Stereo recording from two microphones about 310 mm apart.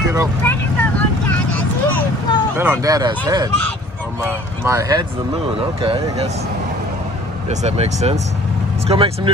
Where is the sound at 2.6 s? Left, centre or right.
Centre.